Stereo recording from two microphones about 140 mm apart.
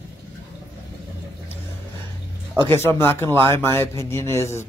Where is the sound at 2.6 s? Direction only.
15° left (ahead or behind).